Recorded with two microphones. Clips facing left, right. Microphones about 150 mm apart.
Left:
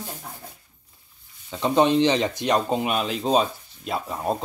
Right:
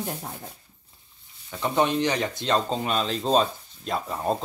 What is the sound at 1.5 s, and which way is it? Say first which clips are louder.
Speech: left 4 dB; 20° left (ahead or behind).